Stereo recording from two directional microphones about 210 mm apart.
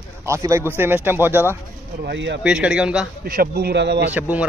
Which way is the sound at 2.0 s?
55° right (ahead or behind).